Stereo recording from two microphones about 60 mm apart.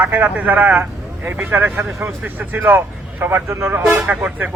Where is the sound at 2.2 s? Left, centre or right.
Right.